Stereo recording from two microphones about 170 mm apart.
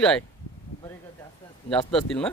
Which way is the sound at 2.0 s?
5° left (ahead or behind).